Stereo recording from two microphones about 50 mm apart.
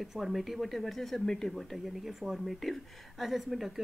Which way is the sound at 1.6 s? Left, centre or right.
Centre.